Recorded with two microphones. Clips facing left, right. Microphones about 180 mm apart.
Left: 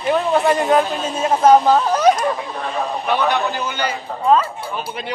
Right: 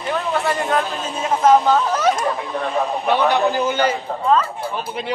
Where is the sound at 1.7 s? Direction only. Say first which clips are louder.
Left 3 dB; 15° left (ahead or behind).